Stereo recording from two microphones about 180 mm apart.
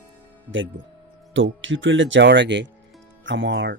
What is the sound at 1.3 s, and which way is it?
Speech, 90° right.